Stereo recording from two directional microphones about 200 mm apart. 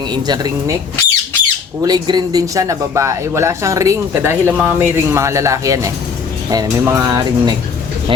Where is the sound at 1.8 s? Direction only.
20° right (ahead or behind).